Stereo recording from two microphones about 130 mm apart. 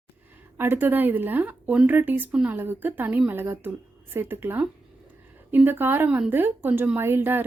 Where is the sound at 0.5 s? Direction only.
15° right (ahead or behind).